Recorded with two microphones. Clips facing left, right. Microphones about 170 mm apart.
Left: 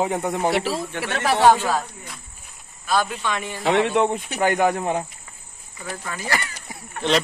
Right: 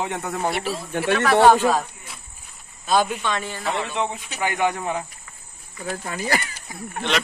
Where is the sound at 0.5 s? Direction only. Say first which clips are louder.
Left 3 dB; 90° left.